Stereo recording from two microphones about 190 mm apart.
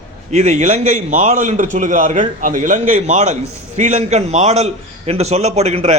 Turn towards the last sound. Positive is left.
turn(degrees=-35)  # may be behind; listen again after turning